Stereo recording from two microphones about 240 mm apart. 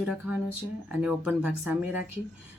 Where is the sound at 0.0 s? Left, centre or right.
Centre.